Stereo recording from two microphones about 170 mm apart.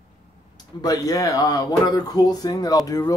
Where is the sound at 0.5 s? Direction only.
20° left (ahead or behind).